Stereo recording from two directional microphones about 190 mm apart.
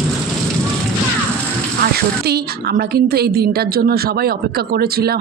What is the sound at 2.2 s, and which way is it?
A woman's voice, 55° right (ahead or behind).